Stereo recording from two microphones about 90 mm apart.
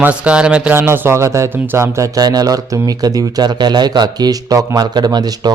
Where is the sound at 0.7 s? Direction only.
25° right (ahead or behind).